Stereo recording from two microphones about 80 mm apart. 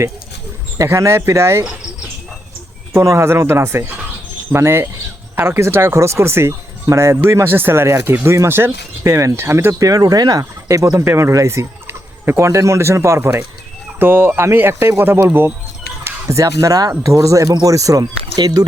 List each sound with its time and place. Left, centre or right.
0.8 s speech: right
3.0 s speech: right
9.7 s speech: right
10.7 s speech: right
11.0 s speech: right
11.3 s fowl: right
12.4 s speech: right
16.0 s speech: right